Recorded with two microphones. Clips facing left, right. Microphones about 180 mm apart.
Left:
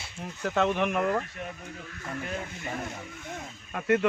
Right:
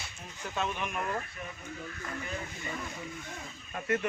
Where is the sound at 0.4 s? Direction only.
75° left (ahead or behind).